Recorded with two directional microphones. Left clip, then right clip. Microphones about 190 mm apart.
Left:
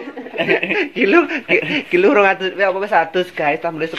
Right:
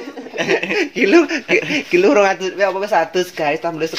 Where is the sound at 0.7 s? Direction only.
30° right (ahead or behind).